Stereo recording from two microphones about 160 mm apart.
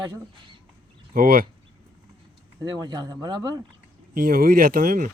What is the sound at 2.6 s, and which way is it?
Speech, 25° right (ahead or behind).